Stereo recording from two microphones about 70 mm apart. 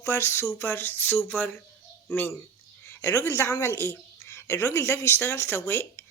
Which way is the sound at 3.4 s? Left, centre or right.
Left.